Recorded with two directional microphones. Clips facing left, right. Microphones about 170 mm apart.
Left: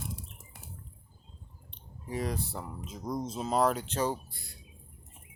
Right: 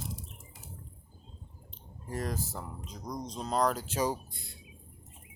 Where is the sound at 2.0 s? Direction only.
Centre (ahead or behind).